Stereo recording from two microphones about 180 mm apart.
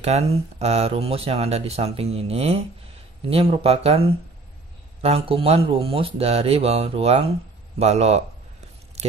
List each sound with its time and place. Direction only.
0.0 s speech: 35° right (ahead or behind)
5.0 s speech: 30° right (ahead or behind)